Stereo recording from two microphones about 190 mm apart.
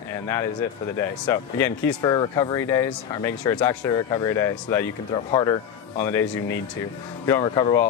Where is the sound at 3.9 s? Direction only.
15° left (ahead or behind).